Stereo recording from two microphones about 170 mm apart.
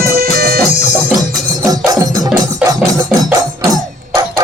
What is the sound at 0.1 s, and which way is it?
Music, 60° right (ahead or behind).